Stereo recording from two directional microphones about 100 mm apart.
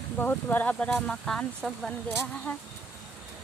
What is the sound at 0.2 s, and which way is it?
Speech, 20° left (ahead or behind).